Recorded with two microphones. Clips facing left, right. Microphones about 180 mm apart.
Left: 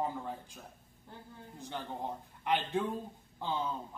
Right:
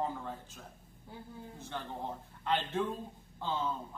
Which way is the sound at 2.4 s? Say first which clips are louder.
Left 1 dB; 15° left (ahead or behind).